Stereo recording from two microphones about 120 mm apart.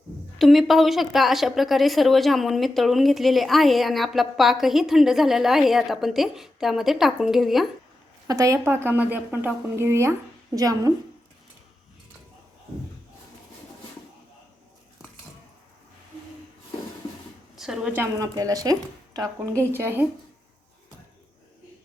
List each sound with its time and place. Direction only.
0.3 s a woman's voice: centre (ahead or behind)
8.3 s a woman's voice: 25° right (ahead or behind)
17.6 s a woman's voice: 5° right (ahead or behind)
17.9 s a woman's voice: 20° right (ahead or behind)
18.3 s a woman's voice: 30° right (ahead or behind)
19.7 s a woman's voice: 20° right (ahead or behind)